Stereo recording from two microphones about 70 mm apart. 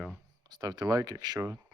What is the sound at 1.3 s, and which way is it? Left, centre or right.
Speech, right.